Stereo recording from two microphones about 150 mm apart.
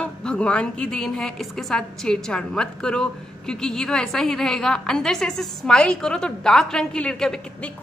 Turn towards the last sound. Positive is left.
turn(degrees=5)  # may be behind; listen again after turning